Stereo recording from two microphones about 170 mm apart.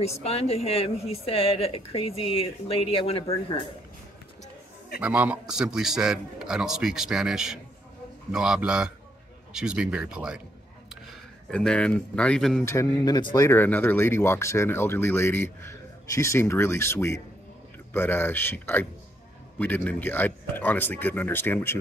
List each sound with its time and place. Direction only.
0.2 s a woman's voice: 35° left (ahead or behind)
5.0 s a man's voice: 10° right (ahead or behind)
11.5 s speech: 5° left (ahead or behind)
12.6 s speech: 20° left (ahead or behind)